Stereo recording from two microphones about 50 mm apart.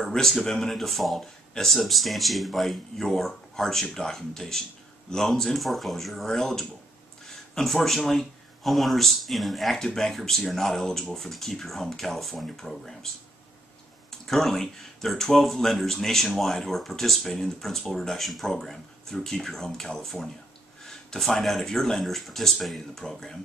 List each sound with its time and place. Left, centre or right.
0.0 s speech: centre
14.2 s speech: centre